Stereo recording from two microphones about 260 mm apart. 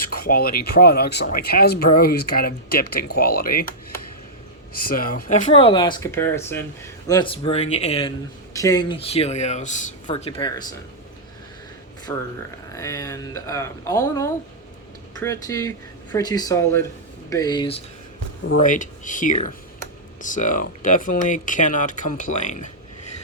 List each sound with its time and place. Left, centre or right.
0.3 s speech: left
4.7 s speech: left
8.5 s speech: centre
12.1 s speech: centre
18.5 s speech: left